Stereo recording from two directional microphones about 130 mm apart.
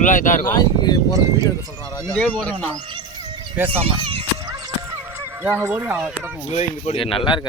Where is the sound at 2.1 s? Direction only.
10° left (ahead or behind).